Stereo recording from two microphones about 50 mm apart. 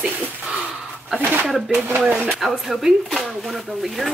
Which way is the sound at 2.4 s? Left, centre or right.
Centre.